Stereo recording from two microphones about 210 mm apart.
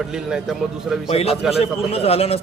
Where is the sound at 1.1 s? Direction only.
30° left (ahead or behind).